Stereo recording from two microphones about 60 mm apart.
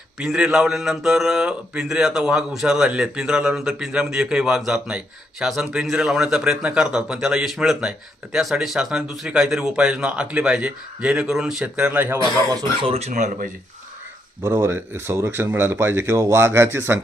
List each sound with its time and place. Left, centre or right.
0.3 s speech: centre
11.6 s speech: right
14.4 s speech: right
16.1 s speech: right
16.5 s speech: right